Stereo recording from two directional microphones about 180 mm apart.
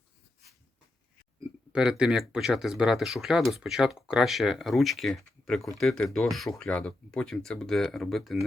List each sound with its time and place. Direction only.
1.7 s speech: 5° right (ahead or behind)